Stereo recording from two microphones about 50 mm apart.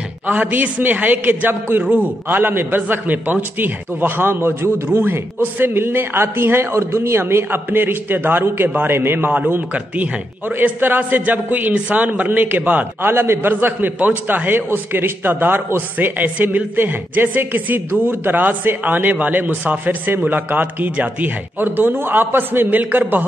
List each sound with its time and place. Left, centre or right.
0.3 s a man's voice: right
1.8 s a man's voice: right
10.8 s a man's voice: right
13.1 s a man's voice: right